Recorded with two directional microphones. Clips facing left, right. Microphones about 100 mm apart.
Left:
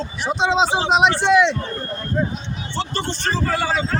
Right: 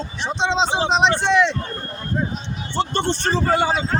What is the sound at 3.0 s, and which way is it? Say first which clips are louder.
Speech: right 2 dB; 30° right (ahead or behind).